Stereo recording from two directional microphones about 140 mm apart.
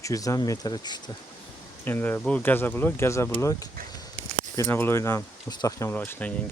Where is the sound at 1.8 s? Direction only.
15° left (ahead or behind).